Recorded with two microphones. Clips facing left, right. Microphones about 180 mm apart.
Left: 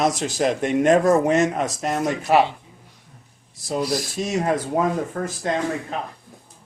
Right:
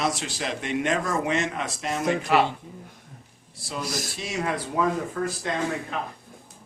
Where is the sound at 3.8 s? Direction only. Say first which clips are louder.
Left 7 dB; 45° right (ahead or behind).